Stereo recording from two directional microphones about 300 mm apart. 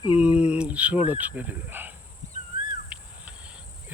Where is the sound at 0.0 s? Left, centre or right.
Centre.